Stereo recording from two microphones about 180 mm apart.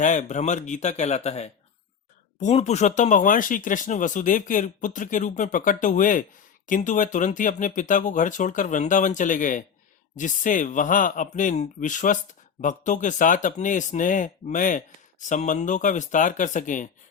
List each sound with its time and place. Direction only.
0.0 s speech: 45° left (ahead or behind)